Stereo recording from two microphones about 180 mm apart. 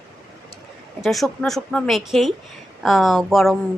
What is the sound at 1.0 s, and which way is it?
A woman's voice, centre (ahead or behind).